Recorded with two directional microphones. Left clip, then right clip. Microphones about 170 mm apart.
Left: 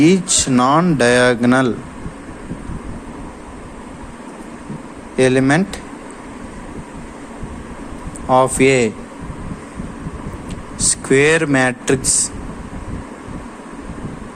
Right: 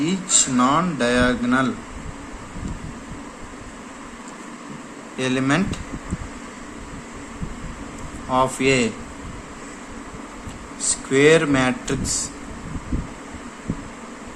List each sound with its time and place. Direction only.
0.0 s speech: 50° left (ahead or behind)
5.1 s a man's voice: 35° left (ahead or behind)
8.3 s a man's voice: 35° left (ahead or behind)
11.1 s a man's voice: 40° left (ahead or behind)